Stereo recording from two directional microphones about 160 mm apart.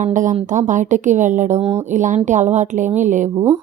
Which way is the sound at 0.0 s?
55° right (ahead or behind).